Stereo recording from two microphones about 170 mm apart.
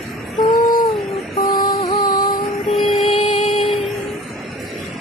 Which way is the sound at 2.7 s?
Centre (ahead or behind).